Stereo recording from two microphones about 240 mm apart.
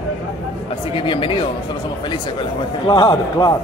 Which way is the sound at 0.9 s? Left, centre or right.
Left.